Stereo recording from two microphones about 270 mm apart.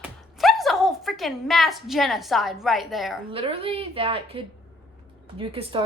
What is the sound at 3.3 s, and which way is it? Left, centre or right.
A woman's voice, centre.